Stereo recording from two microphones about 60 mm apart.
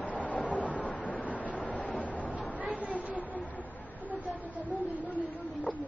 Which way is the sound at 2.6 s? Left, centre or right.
Right.